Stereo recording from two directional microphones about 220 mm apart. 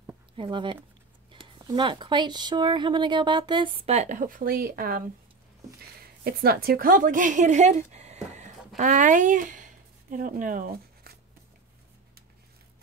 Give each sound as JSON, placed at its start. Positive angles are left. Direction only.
{"t": 0.4, "sound": "speech", "side_deg": -20}
{"t": 6.2, "sound": "speech", "side_deg": -45}